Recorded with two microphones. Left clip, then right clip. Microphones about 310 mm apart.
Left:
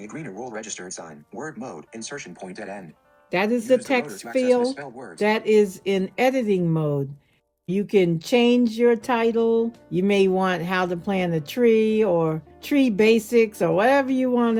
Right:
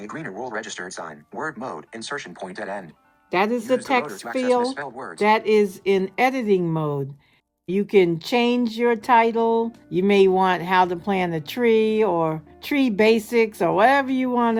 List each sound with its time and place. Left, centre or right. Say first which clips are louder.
0.0 s speech: right 3 dB; centre; by 14.6 s right